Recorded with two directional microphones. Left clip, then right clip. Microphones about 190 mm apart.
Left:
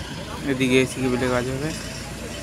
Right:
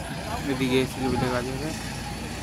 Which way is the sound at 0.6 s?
30° left (ahead or behind).